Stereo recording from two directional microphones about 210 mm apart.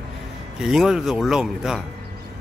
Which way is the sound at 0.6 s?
Centre (ahead or behind).